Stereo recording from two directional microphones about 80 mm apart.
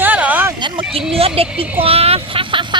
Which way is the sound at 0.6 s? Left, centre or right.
Right.